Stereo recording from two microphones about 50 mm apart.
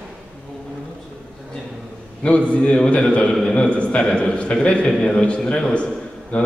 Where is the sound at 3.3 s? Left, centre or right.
Centre.